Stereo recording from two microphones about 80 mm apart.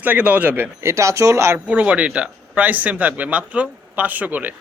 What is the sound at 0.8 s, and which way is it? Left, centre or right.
Speech, right.